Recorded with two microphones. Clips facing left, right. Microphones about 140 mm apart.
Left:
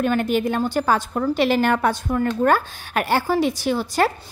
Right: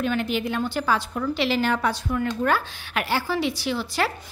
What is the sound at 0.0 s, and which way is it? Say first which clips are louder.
A woman's voice: left 5 dB; 50° left (ahead or behind).